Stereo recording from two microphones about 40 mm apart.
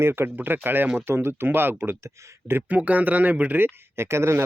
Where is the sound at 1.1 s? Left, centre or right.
Right.